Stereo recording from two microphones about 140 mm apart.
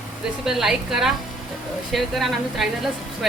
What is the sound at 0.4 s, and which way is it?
A woman's voice, 5° right (ahead or behind).